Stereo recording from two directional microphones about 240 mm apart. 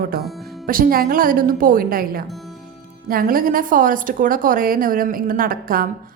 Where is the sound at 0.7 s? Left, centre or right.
Right.